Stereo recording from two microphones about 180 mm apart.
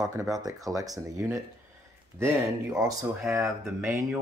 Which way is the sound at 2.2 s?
5° right (ahead or behind).